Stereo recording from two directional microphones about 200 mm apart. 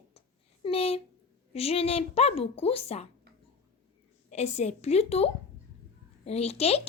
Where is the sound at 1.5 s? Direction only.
30° left (ahead or behind).